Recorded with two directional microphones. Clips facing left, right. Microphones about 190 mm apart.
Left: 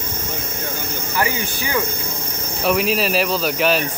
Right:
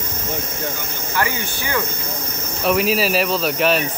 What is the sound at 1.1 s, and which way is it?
Speech, 15° left (ahead or behind).